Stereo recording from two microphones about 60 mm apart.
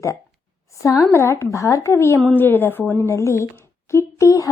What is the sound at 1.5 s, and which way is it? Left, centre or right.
Speech, left.